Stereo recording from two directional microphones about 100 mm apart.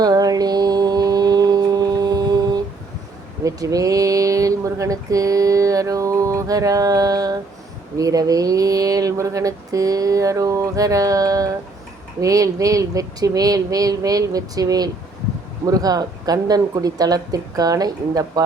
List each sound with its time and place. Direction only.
0.0 s mantra: 40° right (ahead or behind)
3.4 s speech: 35° right (ahead or behind)